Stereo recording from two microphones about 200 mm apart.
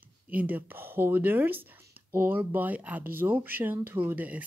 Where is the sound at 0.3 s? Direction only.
10° right (ahead or behind).